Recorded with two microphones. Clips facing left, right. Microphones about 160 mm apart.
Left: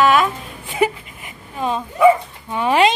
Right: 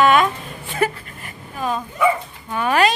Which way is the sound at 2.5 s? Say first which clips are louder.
Left 2 dB; 25° left (ahead or behind).